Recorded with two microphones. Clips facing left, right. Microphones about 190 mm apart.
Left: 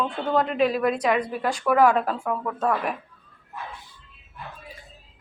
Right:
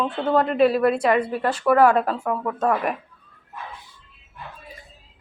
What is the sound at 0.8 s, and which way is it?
A woman's voice, 5° right (ahead or behind).